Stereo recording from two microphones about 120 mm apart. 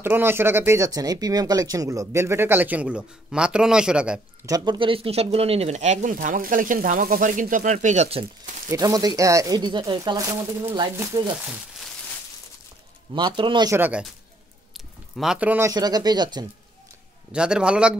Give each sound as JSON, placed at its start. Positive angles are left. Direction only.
{"t": 0.0, "sound": "speech", "side_deg": -20}
{"t": 4.5, "sound": "speech", "side_deg": -30}
{"t": 4.7, "sound": "speech", "side_deg": -45}
{"t": 8.6, "sound": "speech", "side_deg": -30}
{"t": 10.1, "sound": "speech", "side_deg": -25}
{"t": 13.1, "sound": "speech", "side_deg": -40}
{"t": 13.7, "sound": "a man's voice", "side_deg": -15}
{"t": 15.1, "sound": "a man's voice", "side_deg": -10}
{"t": 15.7, "sound": "speech", "side_deg": -35}
{"t": 17.3, "sound": "a man's voice", "side_deg": -10}